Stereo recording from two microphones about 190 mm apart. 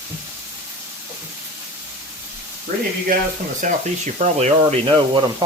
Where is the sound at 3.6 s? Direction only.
40° right (ahead or behind).